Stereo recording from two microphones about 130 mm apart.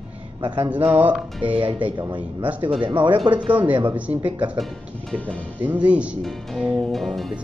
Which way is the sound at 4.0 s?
10° right (ahead or behind).